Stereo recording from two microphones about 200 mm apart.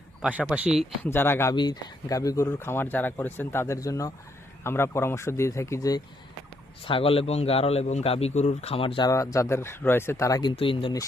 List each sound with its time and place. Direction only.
0.2 s speech: 5° right (ahead or behind)
1.0 s speech: 10° left (ahead or behind)
6.8 s a man's voice: 25° left (ahead or behind)